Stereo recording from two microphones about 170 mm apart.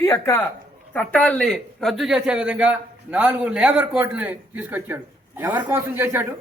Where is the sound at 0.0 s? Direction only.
15° left (ahead or behind).